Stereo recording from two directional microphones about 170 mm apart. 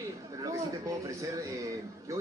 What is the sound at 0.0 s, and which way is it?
A man's voice, 20° right (ahead or behind).